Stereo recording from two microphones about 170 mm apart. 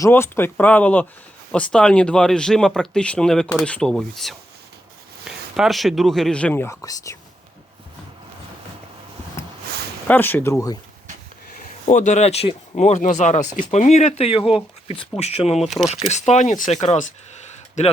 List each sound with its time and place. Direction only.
0.0 s speech: 15° left (ahead or behind)
9.4 s a sound: 15° left (ahead or behind)
10.1 s speech: 10° left (ahead or behind)
11.9 s speech: 45° left (ahead or behind)